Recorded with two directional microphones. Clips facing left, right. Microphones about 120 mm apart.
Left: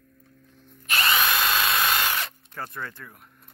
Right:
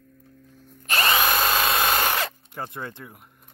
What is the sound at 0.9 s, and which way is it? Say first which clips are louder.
Drill: right 2 dB; 30° right (ahead or behind).